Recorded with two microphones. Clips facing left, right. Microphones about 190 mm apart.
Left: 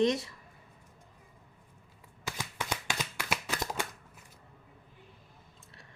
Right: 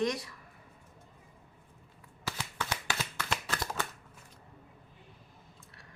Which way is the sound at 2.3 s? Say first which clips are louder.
Even; 15° left (ahead or behind).